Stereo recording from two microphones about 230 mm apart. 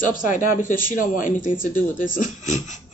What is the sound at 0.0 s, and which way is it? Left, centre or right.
Speech, left.